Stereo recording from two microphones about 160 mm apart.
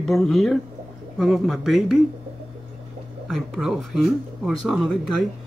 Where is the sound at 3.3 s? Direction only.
5° right (ahead or behind).